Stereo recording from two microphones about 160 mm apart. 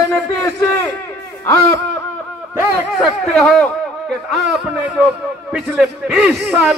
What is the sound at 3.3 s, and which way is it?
A man's voice, 5° left (ahead or behind).